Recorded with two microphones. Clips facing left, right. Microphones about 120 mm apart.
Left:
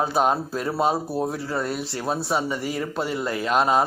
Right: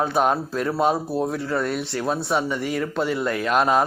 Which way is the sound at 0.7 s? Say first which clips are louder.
Right 1 dB; 5° left (ahead or behind).